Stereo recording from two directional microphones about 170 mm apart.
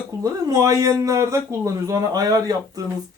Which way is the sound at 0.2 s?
20° right (ahead or behind).